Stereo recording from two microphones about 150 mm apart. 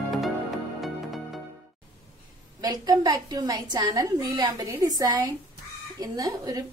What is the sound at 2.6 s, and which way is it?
A woman's voice, 25° right (ahead or behind).